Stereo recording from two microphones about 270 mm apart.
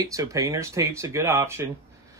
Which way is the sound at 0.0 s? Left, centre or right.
Centre.